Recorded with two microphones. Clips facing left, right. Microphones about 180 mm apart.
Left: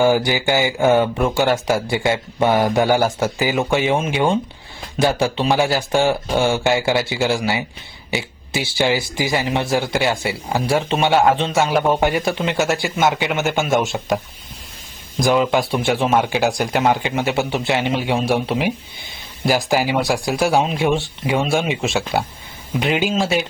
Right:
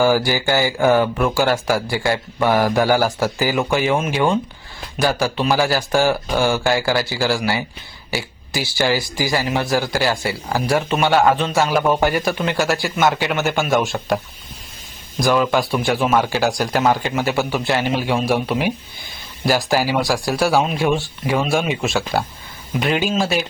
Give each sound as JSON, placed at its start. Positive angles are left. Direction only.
{"t": 0.0, "sound": "speech", "side_deg": 20}
{"t": 11.1, "sound": "a man's voice", "side_deg": 0}
{"t": 11.3, "sound": "speech", "side_deg": 25}
{"t": 15.2, "sound": "speech", "side_deg": 20}